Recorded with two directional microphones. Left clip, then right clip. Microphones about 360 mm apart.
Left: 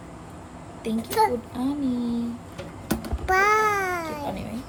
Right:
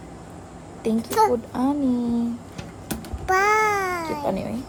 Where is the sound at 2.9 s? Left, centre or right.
Centre.